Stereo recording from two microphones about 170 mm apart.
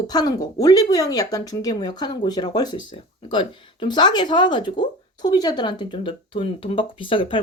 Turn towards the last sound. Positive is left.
turn(degrees=30)  # may be behind; listen again after turning